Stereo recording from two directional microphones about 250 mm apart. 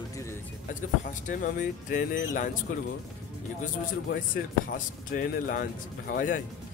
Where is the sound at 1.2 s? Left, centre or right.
Left.